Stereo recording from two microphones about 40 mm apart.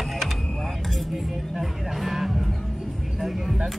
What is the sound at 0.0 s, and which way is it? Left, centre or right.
Vehicle, centre.